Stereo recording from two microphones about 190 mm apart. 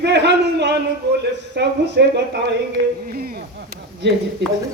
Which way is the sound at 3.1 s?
50° right (ahead or behind).